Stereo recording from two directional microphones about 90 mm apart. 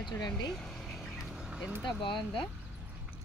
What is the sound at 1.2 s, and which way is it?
Duck, 5° right (ahead or behind).